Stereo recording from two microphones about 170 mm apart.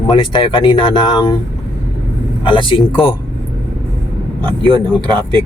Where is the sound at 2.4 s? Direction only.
30° left (ahead or behind).